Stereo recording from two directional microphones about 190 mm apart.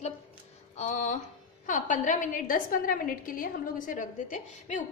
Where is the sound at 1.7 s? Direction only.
40° left (ahead or behind).